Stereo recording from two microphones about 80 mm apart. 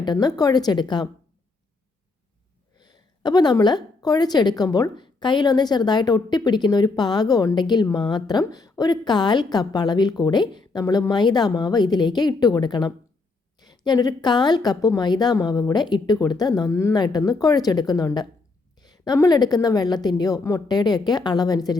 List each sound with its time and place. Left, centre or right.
0.0 s a woman's voice: left
2.7 s a woman's voice: left
5.0 s a woman's voice: left
11.1 s a woman's voice: left